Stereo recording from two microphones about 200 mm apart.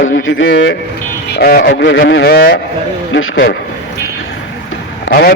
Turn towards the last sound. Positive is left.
turn(degrees=55)  # may be behind; listen again after turning